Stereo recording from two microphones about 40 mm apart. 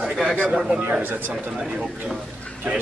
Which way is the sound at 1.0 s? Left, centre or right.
Right.